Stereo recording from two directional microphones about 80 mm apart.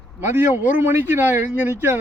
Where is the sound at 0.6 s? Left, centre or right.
Right.